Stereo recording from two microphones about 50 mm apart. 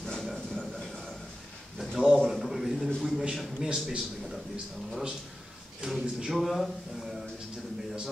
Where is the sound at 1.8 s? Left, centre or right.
Centre.